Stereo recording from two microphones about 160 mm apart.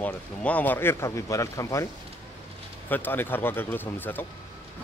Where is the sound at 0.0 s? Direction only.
10° left (ahead or behind).